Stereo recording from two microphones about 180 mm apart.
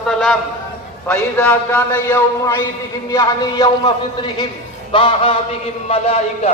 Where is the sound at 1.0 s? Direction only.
10° left (ahead or behind).